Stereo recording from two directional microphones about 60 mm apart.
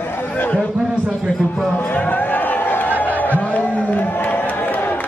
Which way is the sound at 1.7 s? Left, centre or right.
Left.